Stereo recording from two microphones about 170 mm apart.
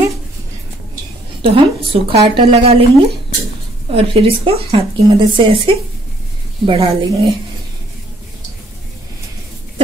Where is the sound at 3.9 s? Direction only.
35° right (ahead or behind).